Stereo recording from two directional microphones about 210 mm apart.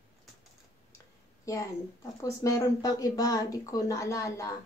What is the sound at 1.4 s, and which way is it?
A woman's voice, 15° left (ahead or behind).